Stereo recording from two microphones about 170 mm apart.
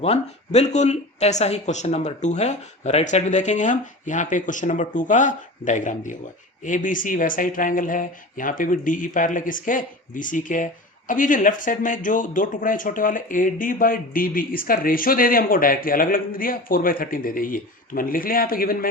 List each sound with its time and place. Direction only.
0.0 s speech: 40° left (ahead or behind); by 18.9 s 60° left (ahead or behind)